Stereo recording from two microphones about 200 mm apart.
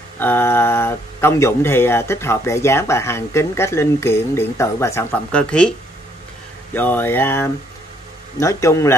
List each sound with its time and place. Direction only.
0.2 s speech: 10° left (ahead or behind)